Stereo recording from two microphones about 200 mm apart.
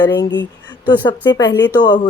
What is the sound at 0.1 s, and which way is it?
Speech, 60° left (ahead or behind).